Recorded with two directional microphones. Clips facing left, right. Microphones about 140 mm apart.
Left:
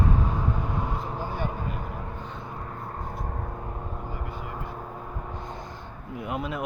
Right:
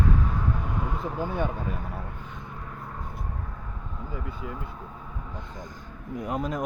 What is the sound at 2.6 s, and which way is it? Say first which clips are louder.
Vehicle: left 3 dB; 45° left (ahead or behind).